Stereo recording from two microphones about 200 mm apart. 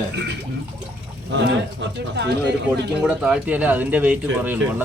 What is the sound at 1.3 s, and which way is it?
Speech, 60° right (ahead or behind).